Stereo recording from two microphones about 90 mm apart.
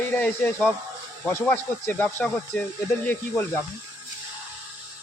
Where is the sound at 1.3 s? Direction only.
25° left (ahead or behind).